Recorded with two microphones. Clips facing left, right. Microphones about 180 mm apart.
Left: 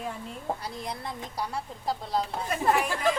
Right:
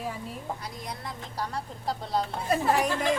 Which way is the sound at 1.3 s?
10° left (ahead or behind).